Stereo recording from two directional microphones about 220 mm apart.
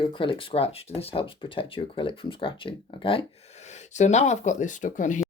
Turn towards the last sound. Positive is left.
turn(degrees=35)  # may be behind; listen again after turning